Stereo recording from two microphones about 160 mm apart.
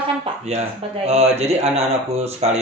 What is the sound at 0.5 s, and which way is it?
Speech, 40° right (ahead or behind).